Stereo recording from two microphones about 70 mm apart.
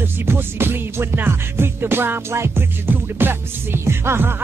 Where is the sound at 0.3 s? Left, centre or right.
Right.